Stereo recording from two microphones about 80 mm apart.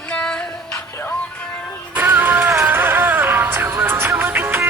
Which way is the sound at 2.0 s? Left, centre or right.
Right.